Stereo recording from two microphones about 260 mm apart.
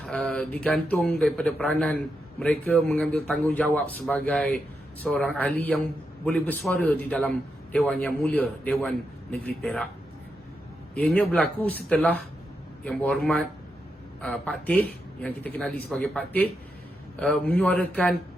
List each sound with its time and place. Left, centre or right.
0.0 s a man's voice: centre
10.9 s a man's voice: centre